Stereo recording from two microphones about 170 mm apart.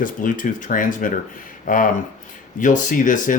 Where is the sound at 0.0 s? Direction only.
50° left (ahead or behind).